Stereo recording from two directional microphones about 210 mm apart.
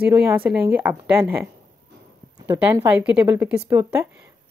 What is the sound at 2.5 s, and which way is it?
Speech, 10° right (ahead or behind).